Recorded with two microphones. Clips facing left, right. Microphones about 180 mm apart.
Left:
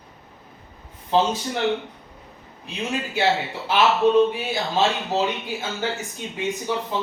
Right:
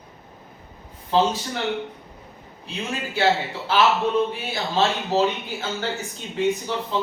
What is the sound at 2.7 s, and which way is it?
Speech, 15° left (ahead or behind).